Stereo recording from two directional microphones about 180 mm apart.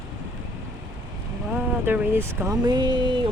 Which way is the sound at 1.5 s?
10° right (ahead or behind).